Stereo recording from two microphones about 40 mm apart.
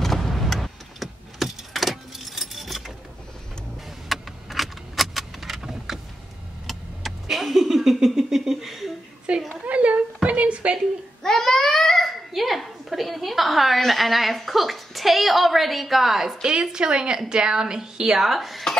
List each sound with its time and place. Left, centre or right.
0.0 s vehicle: centre
4.1 s keys jangling: centre
6.7 s vehicle: centre
9.3 s a sound: right
11.2 s babbling: centre
12.4 s a sound: centre
16.7 s a woman's voice: centre
18.2 s speech: centre